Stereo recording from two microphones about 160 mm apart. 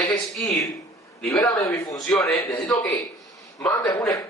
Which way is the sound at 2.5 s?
25° left (ahead or behind).